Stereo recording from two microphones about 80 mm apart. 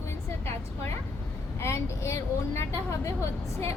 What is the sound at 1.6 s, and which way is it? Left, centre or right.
Speech, left.